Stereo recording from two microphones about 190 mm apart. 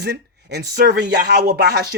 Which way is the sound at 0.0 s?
60° right (ahead or behind).